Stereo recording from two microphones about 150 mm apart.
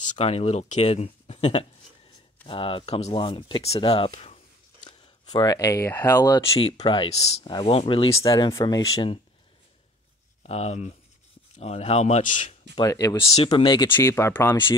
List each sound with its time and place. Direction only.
0.0 s speech: 50° left (ahead or behind)
5.3 s speech: 25° left (ahead or behind)
8.1 s speech: 25° left (ahead or behind)
10.4 s speech: 45° left (ahead or behind)
12.7 s speech: 25° left (ahead or behind)
13.8 s speech: 15° left (ahead or behind)